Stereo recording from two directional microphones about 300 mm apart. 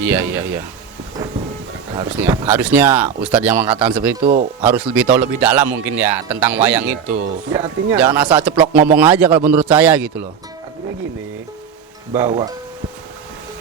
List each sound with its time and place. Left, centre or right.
0.0 s speech: centre
2.0 s a man's voice: centre
4.2 s speech: right
4.6 s a man's voice: centre
12.1 s speech: centre